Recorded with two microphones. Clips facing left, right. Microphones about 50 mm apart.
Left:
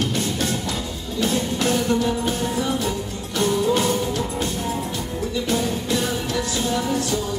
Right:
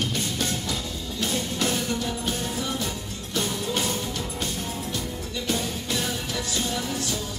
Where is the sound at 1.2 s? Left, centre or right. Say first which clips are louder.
Left 5 dB; centre.